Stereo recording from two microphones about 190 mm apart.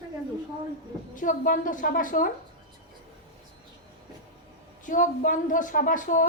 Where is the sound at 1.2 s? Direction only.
45° left (ahead or behind).